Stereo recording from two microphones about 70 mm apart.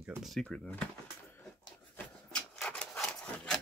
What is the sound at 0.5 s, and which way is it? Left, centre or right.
Speech, centre.